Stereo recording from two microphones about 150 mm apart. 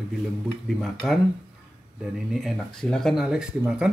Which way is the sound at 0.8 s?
Centre (ahead or behind).